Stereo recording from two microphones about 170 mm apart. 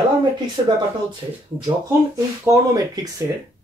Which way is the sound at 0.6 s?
30° right (ahead or behind).